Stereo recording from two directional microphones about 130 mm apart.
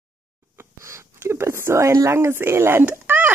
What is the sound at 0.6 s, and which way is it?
Speech, 20° right (ahead or behind).